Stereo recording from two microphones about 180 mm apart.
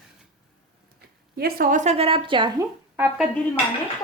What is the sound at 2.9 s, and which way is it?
Speech, 10° right (ahead or behind).